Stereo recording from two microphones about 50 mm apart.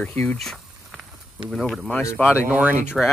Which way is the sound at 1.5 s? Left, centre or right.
Centre.